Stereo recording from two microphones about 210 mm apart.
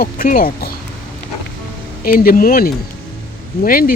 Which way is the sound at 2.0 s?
45° left (ahead or behind).